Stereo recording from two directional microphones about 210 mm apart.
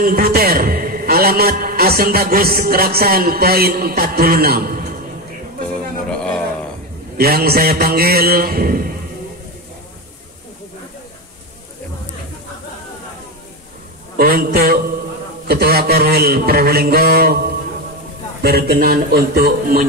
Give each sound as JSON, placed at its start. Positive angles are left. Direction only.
{"t": 0.0, "sound": "a man's voice", "side_deg": -45}
{"t": 6.1, "sound": "a sound", "side_deg": 5}
{"t": 7.2, "sound": "a man's voice", "side_deg": -45}
{"t": 14.1, "sound": "a man's voice", "side_deg": -45}